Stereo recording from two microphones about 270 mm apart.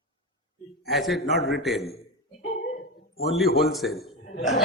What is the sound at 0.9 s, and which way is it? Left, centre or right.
Speech, centre.